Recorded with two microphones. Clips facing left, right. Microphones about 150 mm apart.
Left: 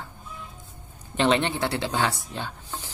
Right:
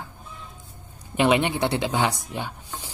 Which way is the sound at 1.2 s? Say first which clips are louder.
Right 2 dB; 10° right (ahead or behind).